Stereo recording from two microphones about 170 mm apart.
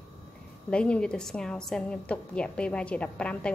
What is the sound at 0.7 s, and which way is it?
A woman's voice, 5° left (ahead or behind).